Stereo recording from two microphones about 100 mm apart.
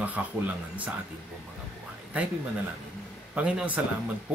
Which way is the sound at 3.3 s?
15° right (ahead or behind).